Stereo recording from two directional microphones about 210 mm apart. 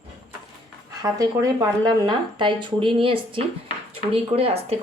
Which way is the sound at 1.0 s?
15° right (ahead or behind).